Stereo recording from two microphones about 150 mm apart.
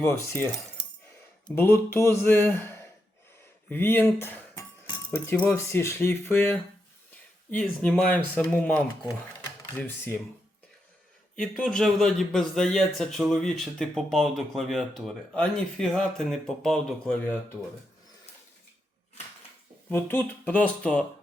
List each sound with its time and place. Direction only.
0.1 s speech: 15° left (ahead or behind)
1.5 s speech: 15° left (ahead or behind)
3.7 s dishes: 15° left (ahead or behind)
5.1 s speech: 15° left (ahead or behind)
11.3 s a man's voice: 5° left (ahead or behind)
19.9 s speech: 15° left (ahead or behind)